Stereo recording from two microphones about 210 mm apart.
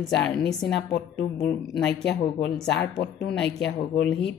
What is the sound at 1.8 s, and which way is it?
A woman's voice, 55° left (ahead or behind).